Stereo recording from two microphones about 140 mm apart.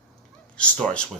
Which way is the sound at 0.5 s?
5° left (ahead or behind).